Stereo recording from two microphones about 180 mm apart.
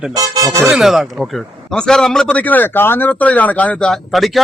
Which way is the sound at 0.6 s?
Centre (ahead or behind).